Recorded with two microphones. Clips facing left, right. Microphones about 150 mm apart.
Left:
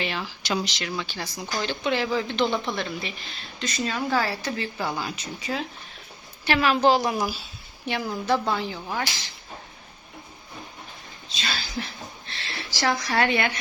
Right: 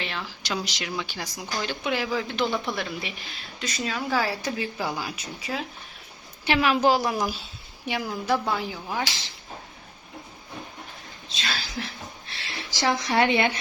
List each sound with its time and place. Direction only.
0.0 s speech: 5° left (ahead or behind)
0.6 s speech: 15° right (ahead or behind)
6.4 s speech: 15° right (ahead or behind)
7.0 s speech: 10° left (ahead or behind)
7.9 s speech: 10° right (ahead or behind)
11.3 s speech: centre (ahead or behind)
12.7 s a woman's voice: 20° right (ahead or behind)